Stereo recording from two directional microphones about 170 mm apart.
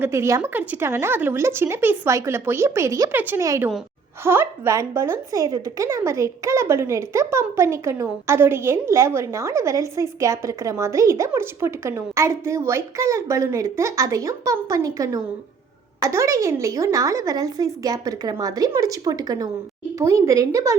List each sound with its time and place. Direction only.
0.0 s a woman's voice: 15° right (ahead or behind)